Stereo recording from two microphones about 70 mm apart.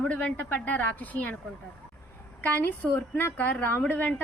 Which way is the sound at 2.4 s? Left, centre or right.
Left.